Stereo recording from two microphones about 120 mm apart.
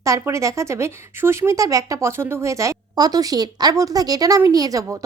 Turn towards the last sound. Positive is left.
turn(degrees=-25)  # may be behind; listen again after turning